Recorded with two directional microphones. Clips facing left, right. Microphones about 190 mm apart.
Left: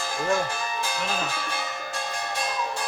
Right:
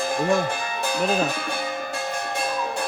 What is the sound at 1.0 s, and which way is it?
Speech, 55° right (ahead or behind).